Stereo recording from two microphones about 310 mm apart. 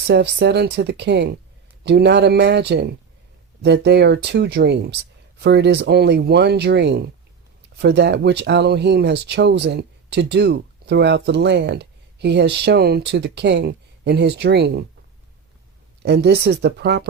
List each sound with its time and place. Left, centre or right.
0.1 s speech: right
16.0 s speech: right